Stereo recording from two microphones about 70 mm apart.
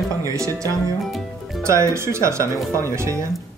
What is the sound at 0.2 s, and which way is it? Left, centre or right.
Speech, right.